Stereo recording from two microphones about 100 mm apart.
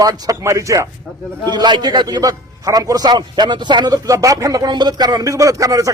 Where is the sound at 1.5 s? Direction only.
45° right (ahead or behind).